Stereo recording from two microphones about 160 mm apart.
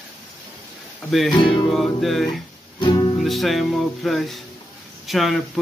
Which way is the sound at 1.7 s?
Centre (ahead or behind).